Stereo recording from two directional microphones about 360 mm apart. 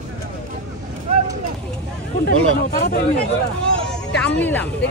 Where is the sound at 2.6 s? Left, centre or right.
Left.